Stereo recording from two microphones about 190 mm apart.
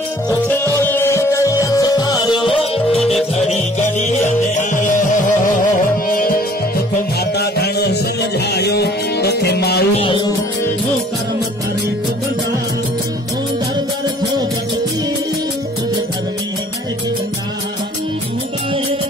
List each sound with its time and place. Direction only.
0.5 s music: 10° left (ahead or behind); by 6.3 s 50° left (ahead or behind)
7.3 s music: 60° left (ahead or behind)
9.9 s music: 25° left (ahead or behind)